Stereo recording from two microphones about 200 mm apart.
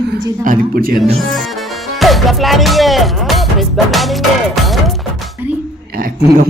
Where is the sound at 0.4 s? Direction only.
45° right (ahead or behind).